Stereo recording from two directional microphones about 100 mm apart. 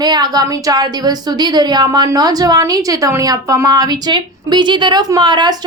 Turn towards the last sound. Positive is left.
turn(degrees=-50)  # may be behind; listen again after turning